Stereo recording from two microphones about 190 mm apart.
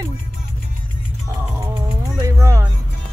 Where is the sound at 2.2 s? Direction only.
15° right (ahead or behind).